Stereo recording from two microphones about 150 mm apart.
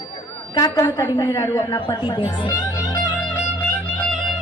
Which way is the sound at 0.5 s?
20° left (ahead or behind).